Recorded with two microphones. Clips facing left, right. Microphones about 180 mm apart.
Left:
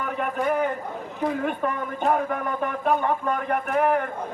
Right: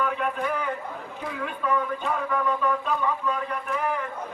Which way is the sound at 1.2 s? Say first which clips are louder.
Left 7 dB; 50° left (ahead or behind).